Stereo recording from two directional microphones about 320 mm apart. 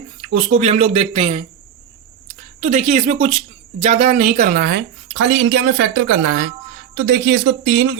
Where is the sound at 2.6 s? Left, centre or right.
Right.